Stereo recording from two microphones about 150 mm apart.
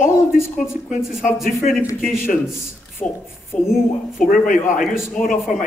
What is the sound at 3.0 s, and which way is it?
Speech, 5° left (ahead or behind).